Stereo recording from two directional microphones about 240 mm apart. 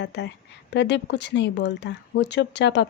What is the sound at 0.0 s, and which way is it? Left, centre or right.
Speech, left.